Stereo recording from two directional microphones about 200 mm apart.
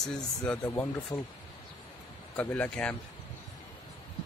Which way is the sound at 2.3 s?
5° left (ahead or behind).